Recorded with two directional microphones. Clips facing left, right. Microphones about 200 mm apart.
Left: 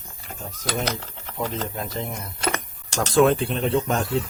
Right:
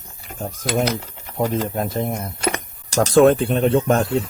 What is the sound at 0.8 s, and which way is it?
Typing, 10° right (ahead or behind).